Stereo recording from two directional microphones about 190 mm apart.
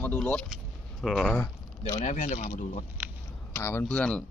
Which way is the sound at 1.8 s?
30° left (ahead or behind).